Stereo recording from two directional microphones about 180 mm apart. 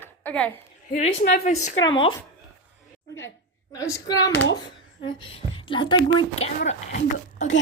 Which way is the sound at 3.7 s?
15° left (ahead or behind).